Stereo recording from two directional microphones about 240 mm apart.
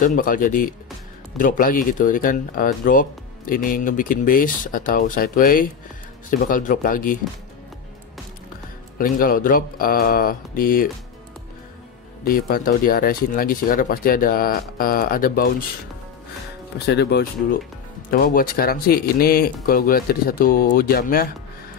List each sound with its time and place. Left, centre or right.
0.0 s speech: left
8.9 s speech: left
12.3 s speech: left
16.7 s speech: left